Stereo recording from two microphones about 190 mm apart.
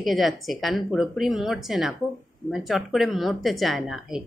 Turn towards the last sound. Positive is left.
turn(degrees=0)  # may be behind; listen again after turning